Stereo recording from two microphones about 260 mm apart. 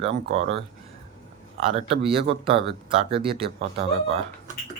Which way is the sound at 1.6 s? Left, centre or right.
Right.